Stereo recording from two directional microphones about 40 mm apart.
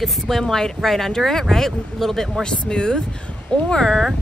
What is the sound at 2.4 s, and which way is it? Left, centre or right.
Speech, left.